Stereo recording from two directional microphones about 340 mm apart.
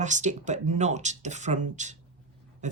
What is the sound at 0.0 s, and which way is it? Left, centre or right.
Speech, right.